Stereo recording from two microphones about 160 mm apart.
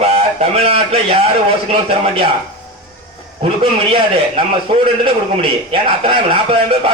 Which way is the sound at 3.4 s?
35° right (ahead or behind).